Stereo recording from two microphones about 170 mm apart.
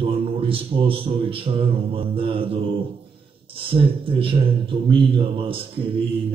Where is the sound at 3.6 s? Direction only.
30° right (ahead or behind).